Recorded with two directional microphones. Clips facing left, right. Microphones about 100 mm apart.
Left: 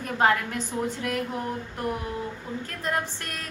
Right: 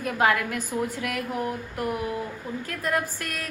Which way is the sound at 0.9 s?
30° left (ahead or behind).